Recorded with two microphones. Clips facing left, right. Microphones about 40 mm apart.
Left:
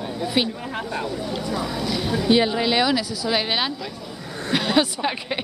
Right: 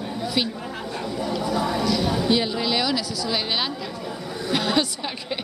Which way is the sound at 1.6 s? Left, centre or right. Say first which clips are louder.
Right 3 dB; right.